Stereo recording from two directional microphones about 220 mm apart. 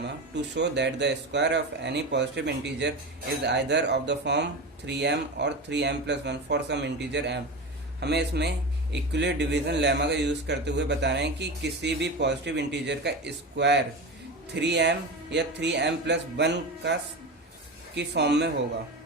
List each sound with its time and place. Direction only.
0.5 s a man's voice: 50° right (ahead or behind)